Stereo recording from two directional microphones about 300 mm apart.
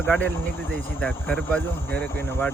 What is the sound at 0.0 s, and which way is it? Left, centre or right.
Speech, centre.